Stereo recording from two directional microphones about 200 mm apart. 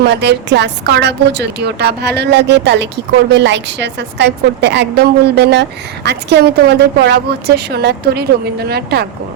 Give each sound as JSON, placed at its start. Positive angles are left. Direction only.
{"t": 0.0, "sound": "a woman's voice", "side_deg": -55}